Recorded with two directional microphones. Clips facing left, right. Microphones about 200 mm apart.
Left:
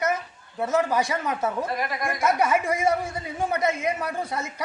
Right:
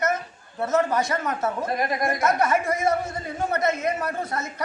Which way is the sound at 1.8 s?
40° right (ahead or behind).